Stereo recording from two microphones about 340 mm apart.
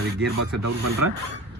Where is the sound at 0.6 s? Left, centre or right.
Right.